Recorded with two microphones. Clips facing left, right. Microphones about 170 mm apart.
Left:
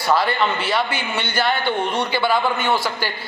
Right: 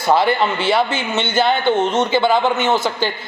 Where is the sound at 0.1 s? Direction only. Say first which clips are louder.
Right 4 dB; 25° right (ahead or behind).